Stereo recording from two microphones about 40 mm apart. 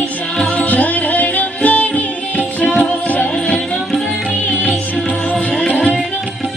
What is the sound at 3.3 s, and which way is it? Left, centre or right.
Music, centre.